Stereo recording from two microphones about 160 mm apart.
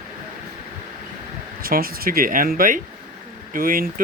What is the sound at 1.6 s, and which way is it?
Speech, 65° right (ahead or behind).